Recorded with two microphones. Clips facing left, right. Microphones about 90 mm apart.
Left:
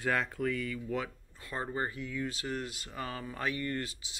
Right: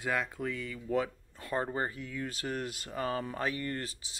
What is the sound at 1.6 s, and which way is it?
Speech, 30° right (ahead or behind).